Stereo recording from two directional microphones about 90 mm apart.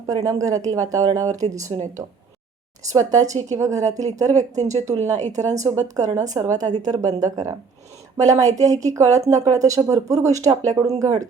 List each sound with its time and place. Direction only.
0.1 s a woman's voice: 40° right (ahead or behind)